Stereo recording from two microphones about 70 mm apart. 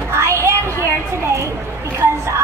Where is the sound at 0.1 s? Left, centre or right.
Right.